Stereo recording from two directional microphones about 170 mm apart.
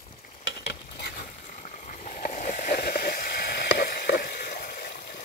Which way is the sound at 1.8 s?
50° left (ahead or behind).